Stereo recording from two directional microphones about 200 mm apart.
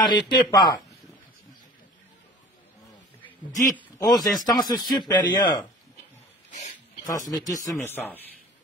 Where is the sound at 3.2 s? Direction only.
10° left (ahead or behind).